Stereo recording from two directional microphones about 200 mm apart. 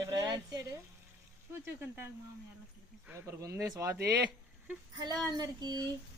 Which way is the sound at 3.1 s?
15° right (ahead or behind).